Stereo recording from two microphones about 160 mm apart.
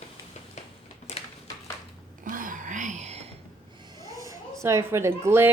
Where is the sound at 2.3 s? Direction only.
55° right (ahead or behind).